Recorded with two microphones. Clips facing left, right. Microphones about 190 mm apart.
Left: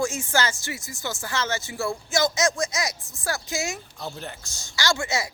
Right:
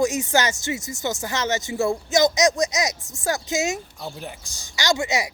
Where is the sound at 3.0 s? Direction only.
45° right (ahead or behind).